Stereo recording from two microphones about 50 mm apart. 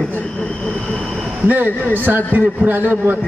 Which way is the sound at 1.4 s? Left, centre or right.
Right.